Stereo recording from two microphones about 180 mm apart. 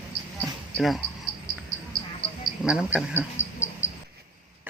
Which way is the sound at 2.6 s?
5° right (ahead or behind).